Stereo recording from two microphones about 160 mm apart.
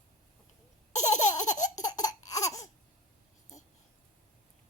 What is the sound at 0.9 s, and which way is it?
Laughter, 45° left (ahead or behind).